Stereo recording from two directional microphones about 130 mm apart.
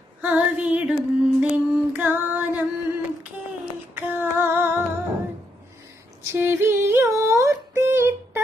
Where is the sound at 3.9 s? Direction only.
15° right (ahead or behind).